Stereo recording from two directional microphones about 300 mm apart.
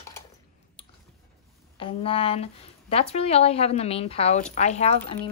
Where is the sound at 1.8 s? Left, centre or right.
Centre.